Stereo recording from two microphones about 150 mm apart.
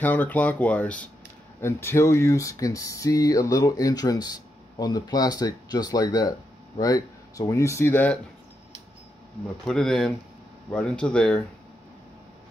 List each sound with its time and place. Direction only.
0.0 s speech: 10° left (ahead or behind)
9.7 s speech: 5° left (ahead or behind)